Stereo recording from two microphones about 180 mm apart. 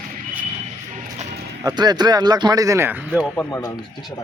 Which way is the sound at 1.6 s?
25° right (ahead or behind).